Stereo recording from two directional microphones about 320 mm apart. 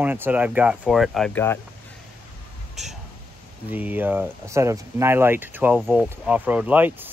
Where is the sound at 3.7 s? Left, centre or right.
Centre.